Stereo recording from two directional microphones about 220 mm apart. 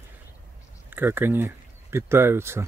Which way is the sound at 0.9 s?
10° right (ahead or behind).